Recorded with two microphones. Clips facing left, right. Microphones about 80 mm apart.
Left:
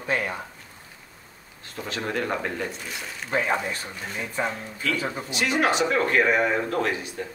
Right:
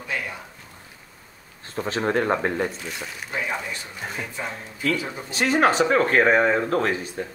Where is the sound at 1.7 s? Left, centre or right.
Right.